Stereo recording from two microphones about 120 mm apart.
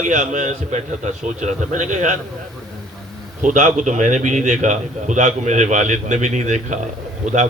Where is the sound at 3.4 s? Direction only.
90° right.